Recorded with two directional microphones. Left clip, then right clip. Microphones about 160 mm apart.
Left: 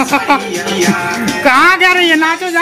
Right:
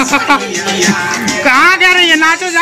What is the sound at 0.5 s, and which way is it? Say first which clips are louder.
Music: right 1 dB; 90° left.